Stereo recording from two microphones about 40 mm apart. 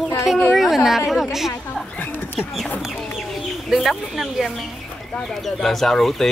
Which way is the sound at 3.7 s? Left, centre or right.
Centre.